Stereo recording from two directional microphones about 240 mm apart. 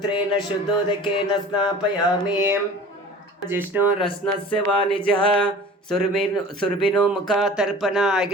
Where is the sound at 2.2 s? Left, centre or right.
Centre.